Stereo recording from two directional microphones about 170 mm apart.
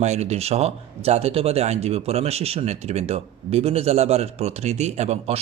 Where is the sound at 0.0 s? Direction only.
40° right (ahead or behind).